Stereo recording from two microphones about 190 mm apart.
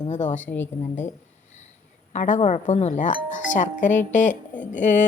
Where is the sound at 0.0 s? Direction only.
40° left (ahead or behind).